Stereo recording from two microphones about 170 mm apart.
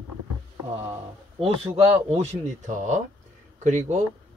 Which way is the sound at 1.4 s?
35° right (ahead or behind).